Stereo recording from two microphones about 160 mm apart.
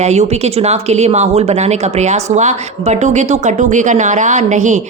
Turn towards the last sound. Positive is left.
turn(degrees=-50)  # may be behind; listen again after turning